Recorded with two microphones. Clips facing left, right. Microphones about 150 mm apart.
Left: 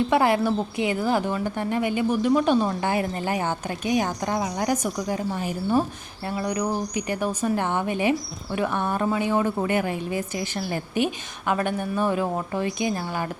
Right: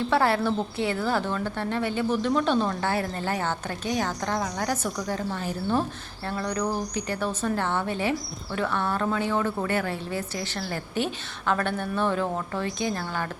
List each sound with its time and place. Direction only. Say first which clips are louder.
0.1 s a woman's voice: left 3 dB; 15° left (ahead or behind)